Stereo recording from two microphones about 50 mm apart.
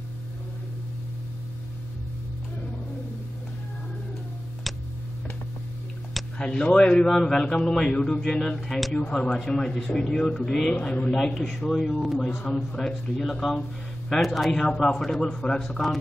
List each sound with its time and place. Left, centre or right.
4.7 s tick-tock: centre
6.3 s speech: centre